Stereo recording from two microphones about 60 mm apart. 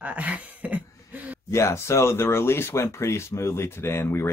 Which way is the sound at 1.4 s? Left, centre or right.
Left.